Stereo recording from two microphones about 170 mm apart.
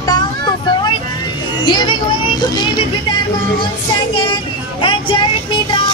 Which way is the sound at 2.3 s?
25° left (ahead or behind).